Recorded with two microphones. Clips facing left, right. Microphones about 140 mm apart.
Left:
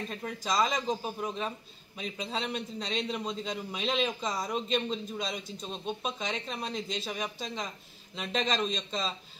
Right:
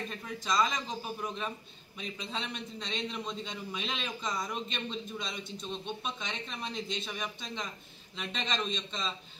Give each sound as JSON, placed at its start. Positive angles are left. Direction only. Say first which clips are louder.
{"t": 0.4, "sound": "a man's voice", "louder": "left 1 dB", "side_deg": 35}